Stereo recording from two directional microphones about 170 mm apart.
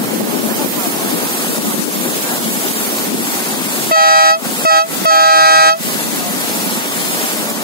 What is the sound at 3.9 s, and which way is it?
Air horn, 60° right (ahead or behind).